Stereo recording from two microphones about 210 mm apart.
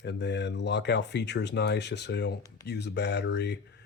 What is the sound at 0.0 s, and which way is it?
Speech, 55° left (ahead or behind).